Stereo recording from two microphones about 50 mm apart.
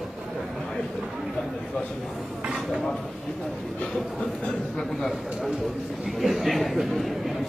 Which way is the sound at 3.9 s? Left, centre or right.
Centre.